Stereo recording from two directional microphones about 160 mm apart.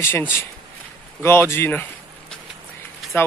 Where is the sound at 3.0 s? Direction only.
Centre (ahead or behind).